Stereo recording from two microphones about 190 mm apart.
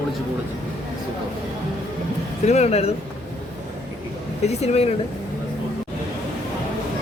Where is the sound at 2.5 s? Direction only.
35° left (ahead or behind).